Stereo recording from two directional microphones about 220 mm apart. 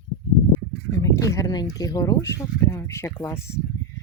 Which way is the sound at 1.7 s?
15° left (ahead or behind).